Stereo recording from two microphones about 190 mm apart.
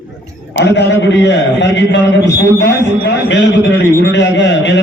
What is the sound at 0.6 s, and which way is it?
A man's voice, 65° left (ahead or behind).